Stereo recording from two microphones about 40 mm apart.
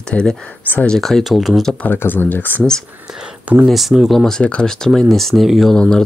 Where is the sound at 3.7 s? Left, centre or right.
Centre.